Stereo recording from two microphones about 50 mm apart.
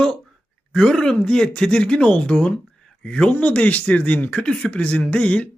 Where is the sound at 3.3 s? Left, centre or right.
Left.